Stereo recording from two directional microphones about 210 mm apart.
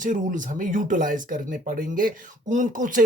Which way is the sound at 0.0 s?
35° right (ahead or behind).